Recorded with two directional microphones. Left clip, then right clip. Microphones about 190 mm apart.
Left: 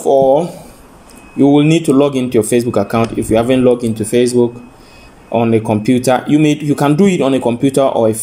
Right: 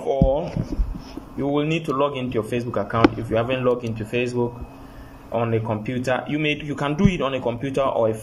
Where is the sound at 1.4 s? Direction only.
40° left (ahead or behind).